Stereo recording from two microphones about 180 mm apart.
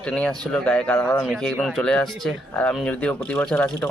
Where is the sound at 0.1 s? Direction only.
5° left (ahead or behind).